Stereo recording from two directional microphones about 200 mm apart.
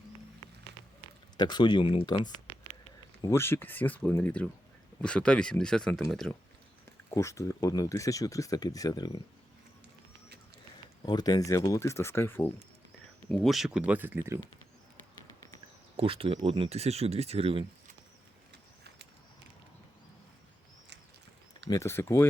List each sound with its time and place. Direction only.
1.4 s speech: 20° left (ahead or behind)
3.2 s speech: 15° left (ahead or behind)
6.8 s speech: 15° left (ahead or behind)
11.0 s speech: 20° left (ahead or behind); by 14.3 s 10° right (ahead or behind)
16.0 s speech: 30° right (ahead or behind)
21.7 s speech: 15° left (ahead or behind)